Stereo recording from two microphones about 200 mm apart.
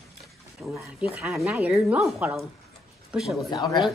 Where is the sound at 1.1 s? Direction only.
Centre (ahead or behind).